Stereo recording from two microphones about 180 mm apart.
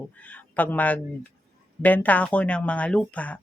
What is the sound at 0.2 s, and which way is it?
A man's voice, 10° left (ahead or behind).